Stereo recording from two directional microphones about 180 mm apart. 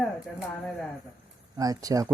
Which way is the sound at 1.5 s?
20° right (ahead or behind).